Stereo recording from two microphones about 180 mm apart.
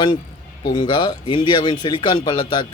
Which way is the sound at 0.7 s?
25° left (ahead or behind).